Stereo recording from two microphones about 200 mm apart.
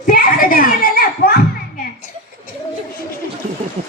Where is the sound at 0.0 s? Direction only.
45° left (ahead or behind).